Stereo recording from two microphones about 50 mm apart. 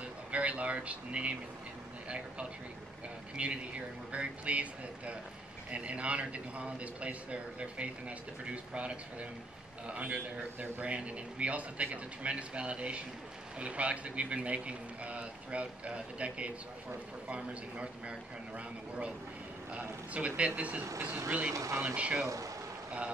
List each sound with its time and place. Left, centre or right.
0.0 s a sound: right
2.0 s a man's voice: right
19.7 s a man's voice: right
21.5 s speech: right
21.9 s a man's voice: right